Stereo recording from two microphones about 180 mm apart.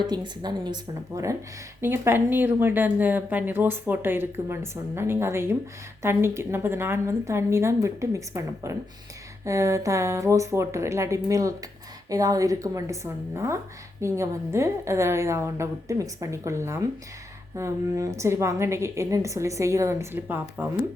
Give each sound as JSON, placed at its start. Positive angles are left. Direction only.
{"t": 0.1, "sound": "a woman's voice", "side_deg": -25}